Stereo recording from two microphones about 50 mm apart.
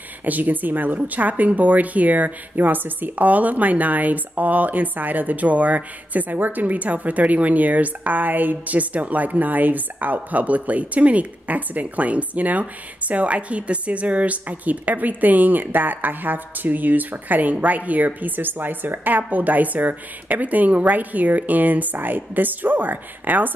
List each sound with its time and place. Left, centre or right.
0.2 s a woman's voice: right